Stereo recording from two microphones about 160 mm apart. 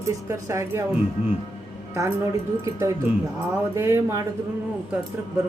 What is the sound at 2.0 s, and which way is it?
Speech, 20° right (ahead or behind).